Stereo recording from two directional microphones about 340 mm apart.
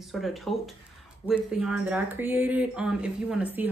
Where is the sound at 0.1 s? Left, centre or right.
Centre.